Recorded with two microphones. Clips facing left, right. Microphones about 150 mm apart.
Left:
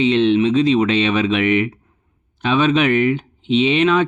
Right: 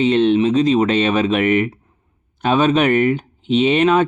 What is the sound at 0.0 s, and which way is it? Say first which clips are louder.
Speech: even; 45° right (ahead or behind).